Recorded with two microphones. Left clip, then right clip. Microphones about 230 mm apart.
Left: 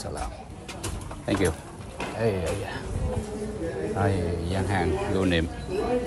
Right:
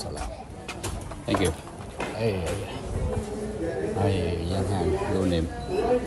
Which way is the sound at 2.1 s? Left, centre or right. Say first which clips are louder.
Left 2 dB; left.